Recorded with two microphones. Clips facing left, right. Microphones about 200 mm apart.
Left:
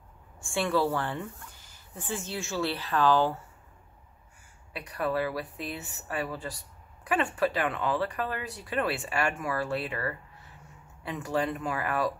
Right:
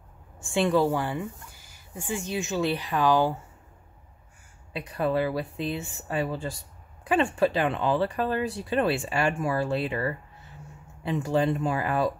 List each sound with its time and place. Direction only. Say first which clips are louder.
0.4 s speech: right 4 dB; 20° right (ahead or behind)
4.7 s speech: right 4 dB; 25° right (ahead or behind)